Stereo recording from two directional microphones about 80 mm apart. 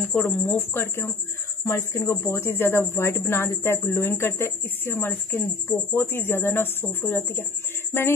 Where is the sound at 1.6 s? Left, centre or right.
Left.